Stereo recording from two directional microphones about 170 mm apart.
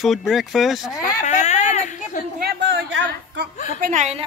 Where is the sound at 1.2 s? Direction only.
45° left (ahead or behind).